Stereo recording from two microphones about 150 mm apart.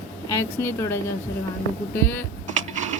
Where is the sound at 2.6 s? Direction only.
55° right (ahead or behind).